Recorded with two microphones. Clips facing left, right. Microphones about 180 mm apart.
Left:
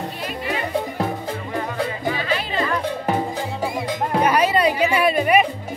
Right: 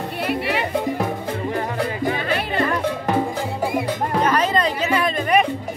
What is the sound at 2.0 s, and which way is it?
Music, 50° right (ahead or behind).